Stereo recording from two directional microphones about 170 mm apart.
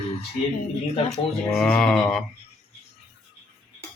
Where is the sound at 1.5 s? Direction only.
5° left (ahead or behind).